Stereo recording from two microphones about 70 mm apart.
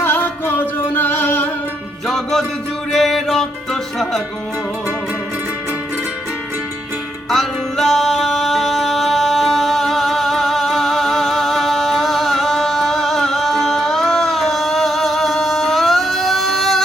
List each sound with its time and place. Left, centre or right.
0.0 s music: left
2.0 s music: centre
7.3 s music: centre